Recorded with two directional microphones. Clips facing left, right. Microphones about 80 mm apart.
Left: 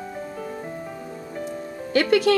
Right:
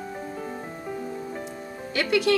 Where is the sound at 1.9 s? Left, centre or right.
Left.